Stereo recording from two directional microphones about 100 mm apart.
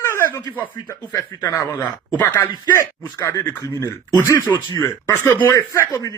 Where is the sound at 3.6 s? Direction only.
35° left (ahead or behind).